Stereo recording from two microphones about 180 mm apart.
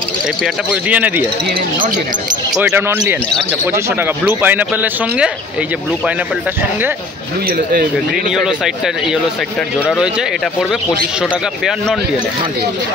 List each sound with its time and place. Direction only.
0.8 s speech: 10° right (ahead or behind)
2.5 s speech: 10° right (ahead or behind)
7.4 s speech: 55° right (ahead or behind)
8.1 s speech: 5° right (ahead or behind)